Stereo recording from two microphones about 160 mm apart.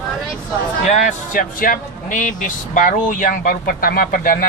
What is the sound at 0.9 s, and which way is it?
Speech, 45° left (ahead or behind).